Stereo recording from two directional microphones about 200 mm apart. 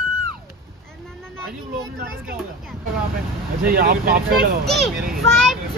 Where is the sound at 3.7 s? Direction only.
45° right (ahead or behind).